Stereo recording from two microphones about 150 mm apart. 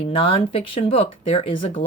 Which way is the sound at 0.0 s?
35° left (ahead or behind).